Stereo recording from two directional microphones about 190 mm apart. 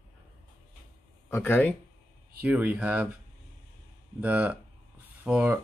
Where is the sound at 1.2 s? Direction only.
10° left (ahead or behind).